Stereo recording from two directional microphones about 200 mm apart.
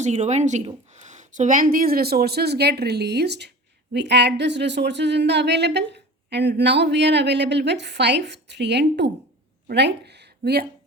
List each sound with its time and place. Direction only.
0.0 s speech: 35° right (ahead or behind); by 10.7 s 55° right (ahead or behind)